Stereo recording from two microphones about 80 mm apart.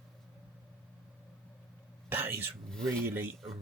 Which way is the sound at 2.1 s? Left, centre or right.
Right.